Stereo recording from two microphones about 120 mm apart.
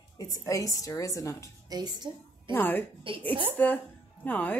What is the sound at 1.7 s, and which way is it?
Speech, 35° right (ahead or behind).